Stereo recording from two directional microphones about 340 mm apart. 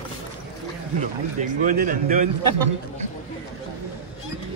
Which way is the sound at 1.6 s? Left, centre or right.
Right.